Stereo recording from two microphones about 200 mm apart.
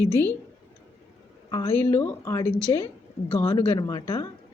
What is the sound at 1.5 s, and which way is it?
A woman's voice, 20° left (ahead or behind).